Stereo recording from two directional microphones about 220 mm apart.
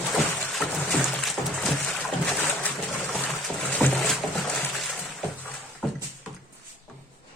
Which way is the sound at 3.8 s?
Centre (ahead or behind).